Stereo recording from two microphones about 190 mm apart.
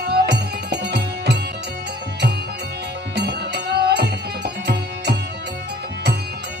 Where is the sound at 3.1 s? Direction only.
60° right (ahead or behind).